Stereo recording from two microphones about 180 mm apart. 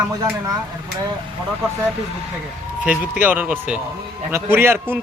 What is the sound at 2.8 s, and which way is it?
A man's voice, 10° right (ahead or behind).